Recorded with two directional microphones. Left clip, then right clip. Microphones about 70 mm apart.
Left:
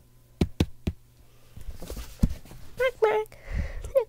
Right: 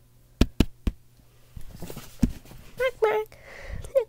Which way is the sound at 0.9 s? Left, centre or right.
Centre.